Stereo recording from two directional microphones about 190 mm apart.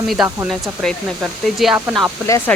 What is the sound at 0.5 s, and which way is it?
Speech, centre (ahead or behind).